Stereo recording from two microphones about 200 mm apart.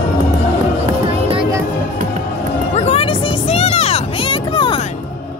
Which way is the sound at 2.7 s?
30° left (ahead or behind).